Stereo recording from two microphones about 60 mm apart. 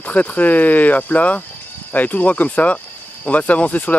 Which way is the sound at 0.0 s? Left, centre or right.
Left.